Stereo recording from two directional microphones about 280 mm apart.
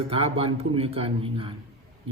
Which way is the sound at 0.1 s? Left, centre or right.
Centre.